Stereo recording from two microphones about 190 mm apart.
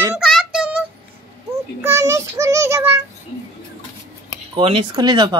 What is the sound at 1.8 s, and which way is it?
Child singing, 15° right (ahead or behind).